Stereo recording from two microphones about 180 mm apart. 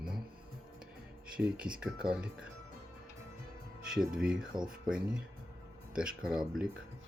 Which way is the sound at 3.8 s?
5° right (ahead or behind).